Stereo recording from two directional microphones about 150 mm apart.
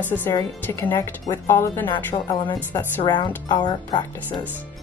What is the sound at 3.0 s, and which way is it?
A woman's voice, 30° left (ahead or behind).